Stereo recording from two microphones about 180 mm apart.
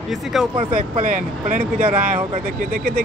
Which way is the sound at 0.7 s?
50° right (ahead or behind).